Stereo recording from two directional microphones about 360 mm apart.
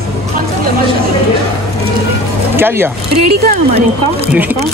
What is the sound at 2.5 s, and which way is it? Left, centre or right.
Speech, centre.